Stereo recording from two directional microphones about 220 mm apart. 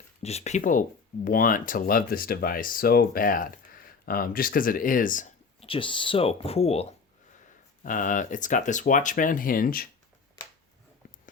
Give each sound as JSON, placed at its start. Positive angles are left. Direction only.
{"t": 0.2, "sound": "speech", "side_deg": 30}
{"t": 7.9, "sound": "speech", "side_deg": 35}